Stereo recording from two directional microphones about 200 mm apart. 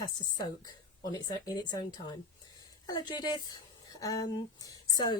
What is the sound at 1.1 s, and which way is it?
A woman's voice, 20° left (ahead or behind).